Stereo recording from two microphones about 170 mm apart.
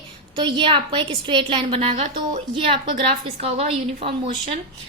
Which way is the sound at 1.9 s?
45° right (ahead or behind).